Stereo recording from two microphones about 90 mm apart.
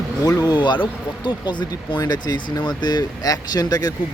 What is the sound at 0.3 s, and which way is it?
Speech, 45° left (ahead or behind).